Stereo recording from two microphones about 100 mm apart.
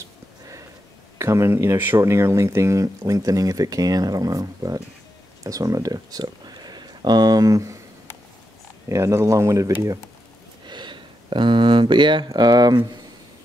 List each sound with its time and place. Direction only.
1.1 s speech: 30° right (ahead or behind)
8.8 s speech: 30° right (ahead or behind)
10.7 s a sound: 50° right (ahead or behind)
12.3 s speech: 45° right (ahead or behind)